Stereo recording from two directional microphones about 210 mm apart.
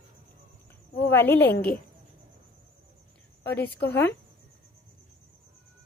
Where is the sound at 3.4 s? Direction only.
10° left (ahead or behind).